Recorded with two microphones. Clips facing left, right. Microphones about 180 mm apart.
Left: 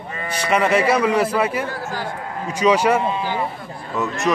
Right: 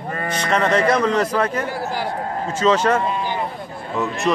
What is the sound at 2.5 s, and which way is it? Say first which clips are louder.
Speech: left 1 dB; 15° left (ahead or behind).